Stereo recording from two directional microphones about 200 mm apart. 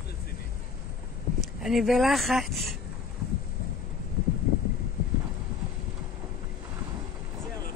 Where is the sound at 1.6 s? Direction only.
Centre (ahead or behind).